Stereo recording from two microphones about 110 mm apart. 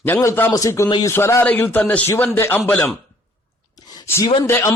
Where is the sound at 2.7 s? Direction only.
10° left (ahead or behind).